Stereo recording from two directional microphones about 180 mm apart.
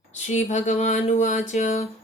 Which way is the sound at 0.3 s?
40° left (ahead or behind).